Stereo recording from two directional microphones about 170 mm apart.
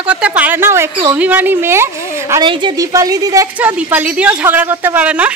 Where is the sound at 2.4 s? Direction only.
30° right (ahead or behind).